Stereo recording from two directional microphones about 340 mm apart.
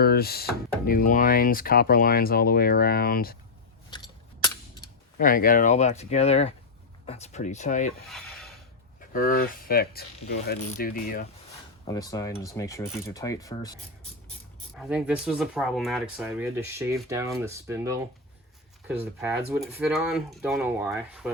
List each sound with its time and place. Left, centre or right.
0.0 s speech: left
3.8 s scissors: centre
5.1 s speech: left
9.1 s speech: left
11.9 s speech: centre
14.8 s speech: centre